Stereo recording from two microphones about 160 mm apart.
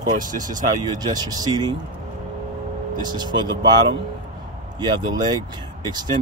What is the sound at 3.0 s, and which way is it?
Speech, 25° right (ahead or behind).